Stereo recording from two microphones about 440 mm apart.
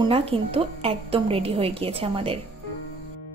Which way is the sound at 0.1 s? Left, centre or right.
Centre.